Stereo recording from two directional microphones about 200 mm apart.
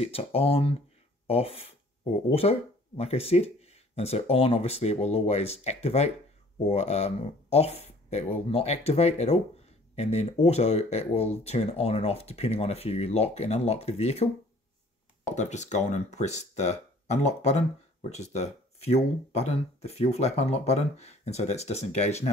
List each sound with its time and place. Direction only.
0.0 s speech: 30° left (ahead or behind)